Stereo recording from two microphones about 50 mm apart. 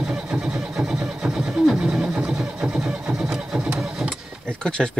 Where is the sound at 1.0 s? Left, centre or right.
Centre.